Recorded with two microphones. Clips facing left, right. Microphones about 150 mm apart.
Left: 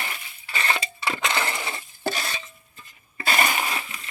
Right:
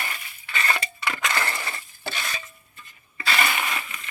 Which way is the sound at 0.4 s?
30° left (ahead or behind).